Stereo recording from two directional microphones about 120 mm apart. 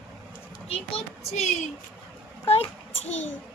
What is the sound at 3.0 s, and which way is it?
Speech, 65° left (ahead or behind).